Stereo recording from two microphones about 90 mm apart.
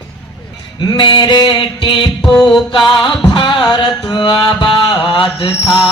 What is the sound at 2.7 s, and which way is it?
Music, 65° left (ahead or behind).